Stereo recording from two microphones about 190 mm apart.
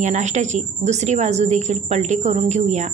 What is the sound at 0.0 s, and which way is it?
Speech, 40° right (ahead or behind).